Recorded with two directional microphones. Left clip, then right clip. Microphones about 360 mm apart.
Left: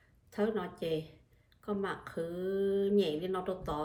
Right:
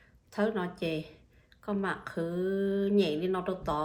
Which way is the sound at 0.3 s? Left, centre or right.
Centre.